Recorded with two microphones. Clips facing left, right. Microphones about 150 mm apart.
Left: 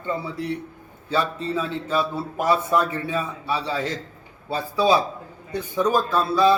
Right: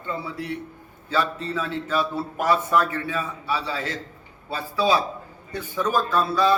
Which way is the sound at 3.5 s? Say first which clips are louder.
Left 2 dB; 30° left (ahead or behind).